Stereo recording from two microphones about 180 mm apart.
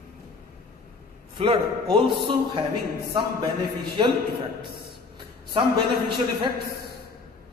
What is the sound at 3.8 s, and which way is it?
Speech, 25° right (ahead or behind).